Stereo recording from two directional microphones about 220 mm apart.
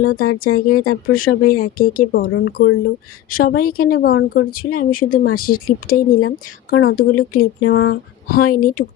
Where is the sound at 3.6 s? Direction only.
40° left (ahead or behind).